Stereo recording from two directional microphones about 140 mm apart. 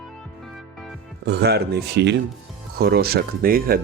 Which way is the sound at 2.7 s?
90° right.